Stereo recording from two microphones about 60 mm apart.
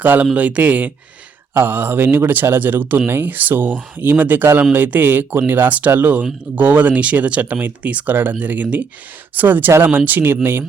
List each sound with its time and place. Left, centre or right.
0.0 s a man's voice: right